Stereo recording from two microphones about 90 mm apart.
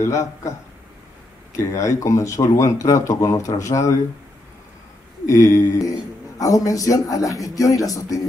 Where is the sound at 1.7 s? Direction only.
35° left (ahead or behind).